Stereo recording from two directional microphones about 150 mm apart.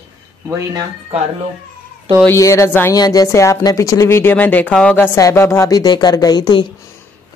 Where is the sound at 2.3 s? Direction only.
20° left (ahead or behind).